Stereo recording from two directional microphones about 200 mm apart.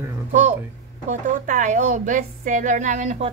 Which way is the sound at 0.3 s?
40° right (ahead or behind).